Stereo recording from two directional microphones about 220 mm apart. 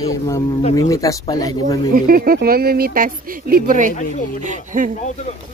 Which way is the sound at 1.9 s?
40° right (ahead or behind).